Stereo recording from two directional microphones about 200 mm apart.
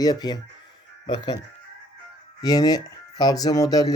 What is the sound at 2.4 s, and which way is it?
Speech, 20° left (ahead or behind).